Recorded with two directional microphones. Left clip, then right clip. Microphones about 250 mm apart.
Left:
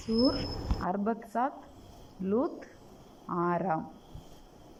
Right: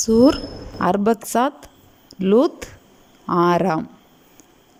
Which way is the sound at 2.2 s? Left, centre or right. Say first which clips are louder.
Right 15 dB; right.